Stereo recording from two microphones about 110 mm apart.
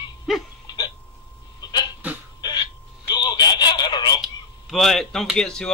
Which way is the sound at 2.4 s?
40° left (ahead or behind).